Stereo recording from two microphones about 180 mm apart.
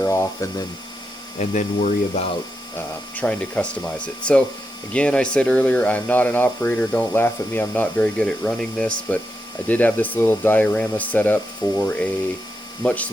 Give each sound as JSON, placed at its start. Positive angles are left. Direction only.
{"t": 0.0, "sound": "speech", "side_deg": 15}
{"t": 1.4, "sound": "speech", "side_deg": 40}
{"t": 2.7, "sound": "speech", "side_deg": 5}